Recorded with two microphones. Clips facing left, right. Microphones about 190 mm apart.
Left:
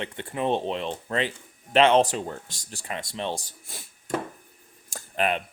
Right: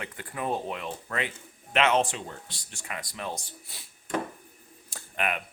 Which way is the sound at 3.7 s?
45° left (ahead or behind).